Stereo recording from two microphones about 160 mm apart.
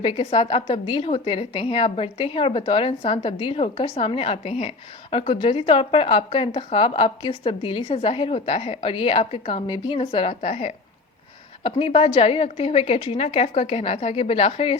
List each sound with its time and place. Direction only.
0.0 s a woman's voice: 35° left (ahead or behind)